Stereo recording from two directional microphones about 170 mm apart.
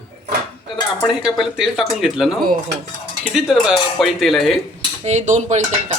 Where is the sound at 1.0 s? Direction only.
5° right (ahead or behind).